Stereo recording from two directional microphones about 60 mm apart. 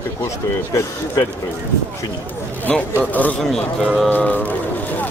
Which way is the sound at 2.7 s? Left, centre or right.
Centre.